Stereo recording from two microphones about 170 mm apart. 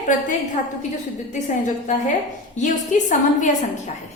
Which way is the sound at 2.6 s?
45° left (ahead or behind).